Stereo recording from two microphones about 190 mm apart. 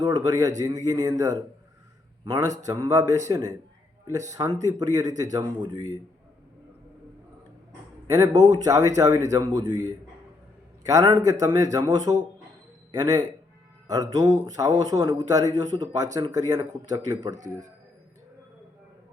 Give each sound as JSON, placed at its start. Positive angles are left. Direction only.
{"t": 0.3, "sound": "a man's voice", "side_deg": -20}
{"t": 8.1, "sound": "a man's voice", "side_deg": -20}
{"t": 17.3, "sound": "speech", "side_deg": -40}